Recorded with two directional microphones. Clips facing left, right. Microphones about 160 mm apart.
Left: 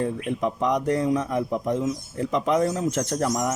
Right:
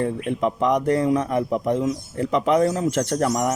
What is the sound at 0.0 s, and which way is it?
A man's voice, 70° right (ahead or behind).